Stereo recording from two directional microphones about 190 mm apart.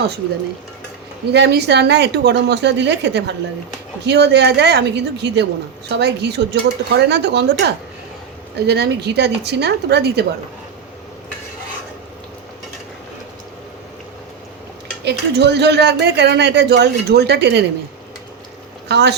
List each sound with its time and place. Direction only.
1.3 s speech: 60° right (ahead or behind)
15.0 s speech: 60° right (ahead or behind)
18.9 s speech: 65° right (ahead or behind)